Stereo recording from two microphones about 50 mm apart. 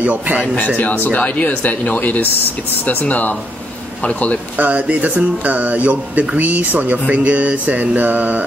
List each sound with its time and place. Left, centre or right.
0.0 s speech: right
0.7 s speech: left
4.6 s speech: right